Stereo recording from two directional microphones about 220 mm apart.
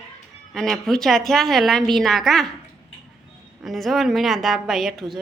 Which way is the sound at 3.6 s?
Centre (ahead or behind).